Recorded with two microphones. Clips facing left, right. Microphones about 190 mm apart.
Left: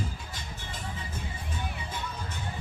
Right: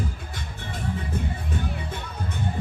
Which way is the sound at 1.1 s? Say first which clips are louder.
Right 9 dB; 60° right (ahead or behind).